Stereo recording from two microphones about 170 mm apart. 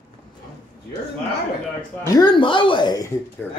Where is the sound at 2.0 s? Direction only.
25° left (ahead or behind).